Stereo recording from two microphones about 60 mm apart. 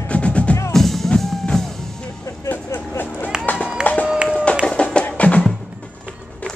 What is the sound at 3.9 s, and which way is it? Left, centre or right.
Run, left.